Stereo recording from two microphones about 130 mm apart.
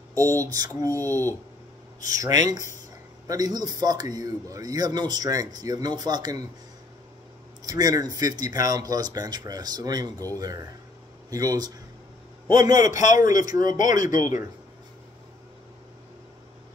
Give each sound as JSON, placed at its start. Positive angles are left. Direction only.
{"t": 0.1, "sound": "a sound", "side_deg": -25}
{"t": 0.5, "sound": "speech", "side_deg": -25}
{"t": 1.0, "sound": "speech", "side_deg": 15}
{"t": 2.0, "sound": "a man's voice", "side_deg": -25}
{"t": 7.6, "sound": "speech", "side_deg": -30}
{"t": 12.8, "sound": "a man's voice", "side_deg": 75}